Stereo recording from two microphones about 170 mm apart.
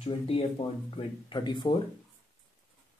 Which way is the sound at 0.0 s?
35° left (ahead or behind).